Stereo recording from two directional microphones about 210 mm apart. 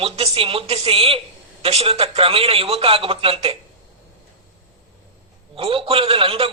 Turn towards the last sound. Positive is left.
turn(degrees=-25)  # may be behind; listen again after turning